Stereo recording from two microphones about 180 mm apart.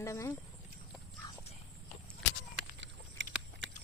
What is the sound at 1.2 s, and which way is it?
Clip-clop, 25° left (ahead or behind).